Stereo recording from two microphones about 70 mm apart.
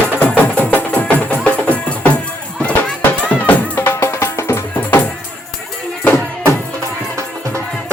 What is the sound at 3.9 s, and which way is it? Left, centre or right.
Music, left.